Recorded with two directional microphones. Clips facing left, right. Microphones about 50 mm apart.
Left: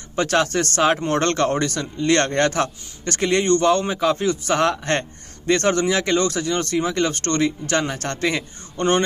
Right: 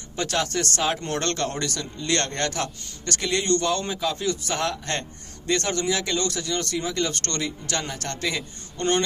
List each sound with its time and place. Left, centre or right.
0.1 s speech: left
8.7 s speech: left